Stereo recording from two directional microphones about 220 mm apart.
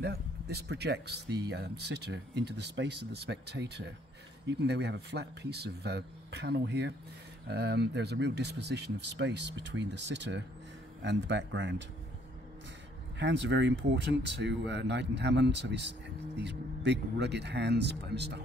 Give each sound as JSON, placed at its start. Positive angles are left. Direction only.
{"t": 0.0, "sound": "speech", "side_deg": -45}
{"t": 13.2, "sound": "speech", "side_deg": -55}